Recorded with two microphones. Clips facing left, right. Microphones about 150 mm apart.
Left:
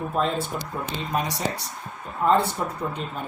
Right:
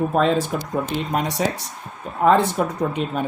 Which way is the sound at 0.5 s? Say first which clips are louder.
Right 5 dB; 90° right.